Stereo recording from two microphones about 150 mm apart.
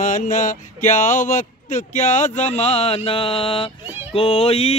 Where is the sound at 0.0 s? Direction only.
60° left (ahead or behind); by 3.7 s 35° left (ahead or behind).